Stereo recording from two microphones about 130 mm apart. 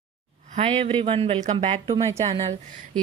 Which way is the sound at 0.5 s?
55° right (ahead or behind).